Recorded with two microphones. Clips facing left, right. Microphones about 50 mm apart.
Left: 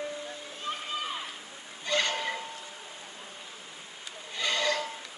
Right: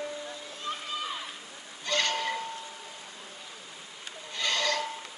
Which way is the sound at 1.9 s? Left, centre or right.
Centre.